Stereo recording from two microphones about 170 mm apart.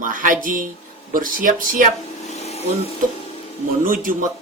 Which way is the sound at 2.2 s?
40° left (ahead or behind).